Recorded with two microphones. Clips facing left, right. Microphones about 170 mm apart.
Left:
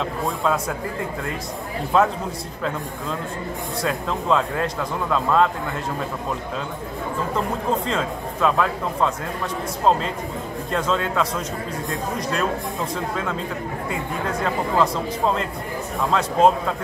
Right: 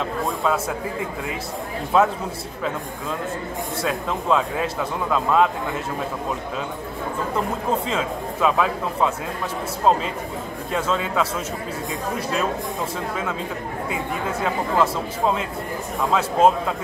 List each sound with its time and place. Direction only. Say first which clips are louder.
0.4 s speech: even; 5° right (ahead or behind)
1.9 s speech: even; 5° right (ahead or behind)
3.8 s speech: left 1 dB; 5° right (ahead or behind)
7.3 s speech: even; 5° right (ahead or behind)
14.4 s speech: even; 5° right (ahead or behind)